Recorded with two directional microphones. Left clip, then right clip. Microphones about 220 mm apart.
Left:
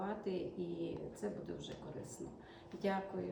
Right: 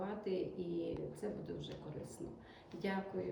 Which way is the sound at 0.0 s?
15° left (ahead or behind).